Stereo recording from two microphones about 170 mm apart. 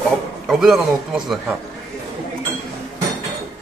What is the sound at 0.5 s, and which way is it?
A man's voice, centre (ahead or behind).